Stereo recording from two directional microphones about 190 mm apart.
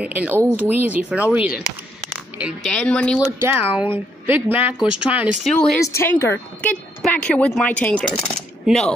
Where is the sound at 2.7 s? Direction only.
5° left (ahead or behind).